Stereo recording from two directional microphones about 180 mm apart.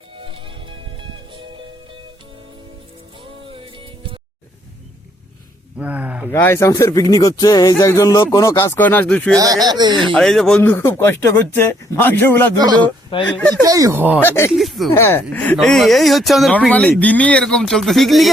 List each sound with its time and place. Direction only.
0.2 s music: 30° right (ahead or behind)
3.5 s music: 30° right (ahead or behind)
5.7 s a sound: 10° right (ahead or behind)
6.3 s speech: 15° left (ahead or behind)
9.3 s speech: 20° right (ahead or behind)
9.9 s speech: centre (ahead or behind)
12.5 s speech: 20° right (ahead or behind)
13.2 s speech: 10° left (ahead or behind)
13.7 s speech: 20° right (ahead or behind)
14.2 s speech: 15° left (ahead or behind)
14.5 s speech: centre (ahead or behind)
14.9 s speech: 10° left (ahead or behind)